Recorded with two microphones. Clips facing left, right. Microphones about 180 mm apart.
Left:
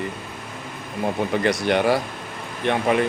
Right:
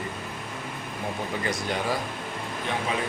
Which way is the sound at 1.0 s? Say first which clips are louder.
Left 9 dB; 75° left (ahead or behind).